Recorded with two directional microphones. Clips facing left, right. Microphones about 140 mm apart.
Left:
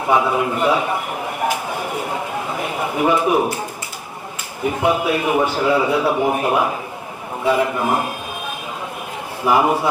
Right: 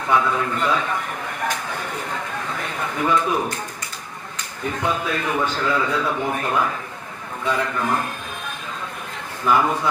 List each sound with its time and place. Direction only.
0.0 s a man's voice: 20° left (ahead or behind)
4.6 s a man's voice: 15° left (ahead or behind)
9.4 s a man's voice: 15° left (ahead or behind)